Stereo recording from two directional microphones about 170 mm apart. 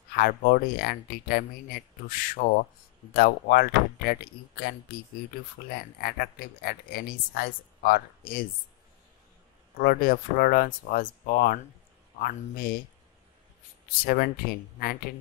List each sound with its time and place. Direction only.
0.1 s speech: 60° left (ahead or behind)
5.9 s speech: 65° left (ahead or behind)
9.8 s speech: 60° left (ahead or behind)
14.0 s speech: 65° left (ahead or behind)